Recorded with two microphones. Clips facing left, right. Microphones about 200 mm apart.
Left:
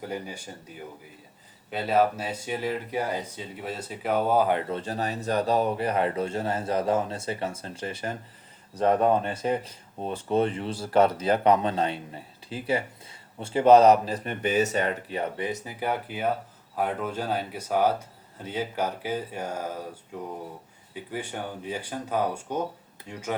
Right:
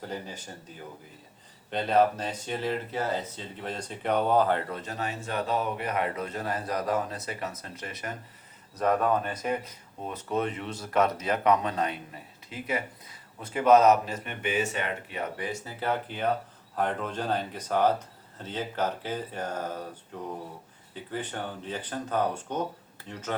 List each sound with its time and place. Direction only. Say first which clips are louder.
0.1 s speech: left 3 dB; 10° left (ahead or behind)
1.7 s speech: even; 5° left (ahead or behind)
4.7 s speech: left 4 dB; 30° left (ahead or behind)
15.4 s speech: left 3 dB; 20° left (ahead or behind)
20.9 s speech: left 1 dB; 10° left (ahead or behind)